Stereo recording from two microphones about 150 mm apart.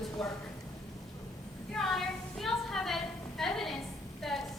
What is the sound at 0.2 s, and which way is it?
Speech, 5° left (ahead or behind).